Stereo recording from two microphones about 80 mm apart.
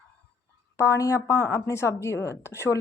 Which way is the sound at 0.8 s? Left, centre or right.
Left.